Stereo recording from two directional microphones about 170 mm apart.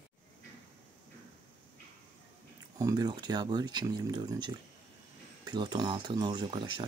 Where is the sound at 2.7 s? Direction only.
20° right (ahead or behind).